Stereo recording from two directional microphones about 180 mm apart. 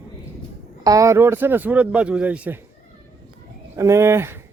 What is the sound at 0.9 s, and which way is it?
Speech, 15° right (ahead or behind).